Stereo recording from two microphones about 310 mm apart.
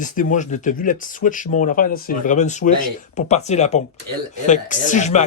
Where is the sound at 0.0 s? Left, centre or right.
Left.